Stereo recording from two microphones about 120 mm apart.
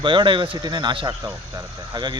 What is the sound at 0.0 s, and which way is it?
Speech, 40° right (ahead or behind).